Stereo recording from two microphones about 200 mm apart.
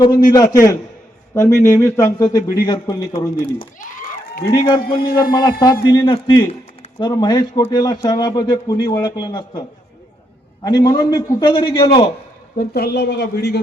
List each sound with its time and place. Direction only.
0.3 s a man's voice: 15° left (ahead or behind)
3.8 s a sound: 40° left (ahead or behind)
4.5 s a man's voice: 20° left (ahead or behind)
4.8 s speech: 50° left (ahead or behind)
5.3 s a man's voice: 20° left (ahead or behind)
12.5 s speech: 50° left (ahead or behind)